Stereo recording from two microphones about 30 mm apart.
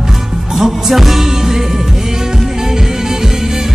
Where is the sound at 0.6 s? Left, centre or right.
Centre.